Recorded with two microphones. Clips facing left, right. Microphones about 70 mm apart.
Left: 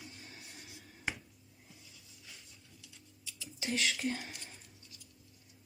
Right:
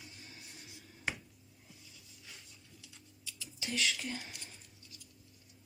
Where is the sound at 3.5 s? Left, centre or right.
Left.